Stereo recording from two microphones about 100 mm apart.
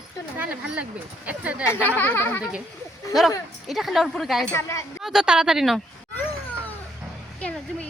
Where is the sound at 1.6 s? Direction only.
20° left (ahead or behind).